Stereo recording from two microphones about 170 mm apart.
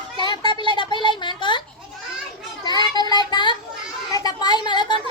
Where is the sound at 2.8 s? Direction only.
25° left (ahead or behind).